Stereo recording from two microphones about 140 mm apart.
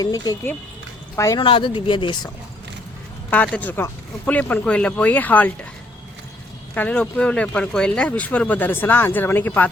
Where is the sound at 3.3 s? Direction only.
10° left (ahead or behind).